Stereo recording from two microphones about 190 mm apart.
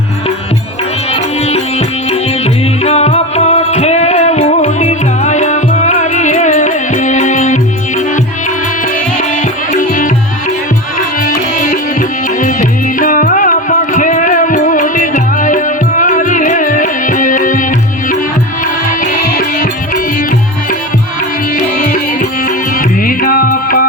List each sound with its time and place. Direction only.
2.0 s music: 35° left (ahead or behind)
11.6 s music: 50° left (ahead or behind)
19.4 s music: 45° left (ahead or behind)
21.5 s music: 45° left (ahead or behind)